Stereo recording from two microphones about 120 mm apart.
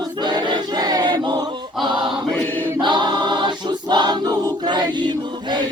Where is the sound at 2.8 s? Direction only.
40° right (ahead or behind).